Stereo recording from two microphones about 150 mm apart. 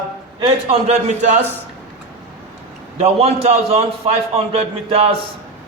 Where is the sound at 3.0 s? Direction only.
40° right (ahead or behind).